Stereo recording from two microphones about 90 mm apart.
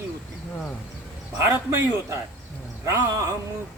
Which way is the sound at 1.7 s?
40° right (ahead or behind).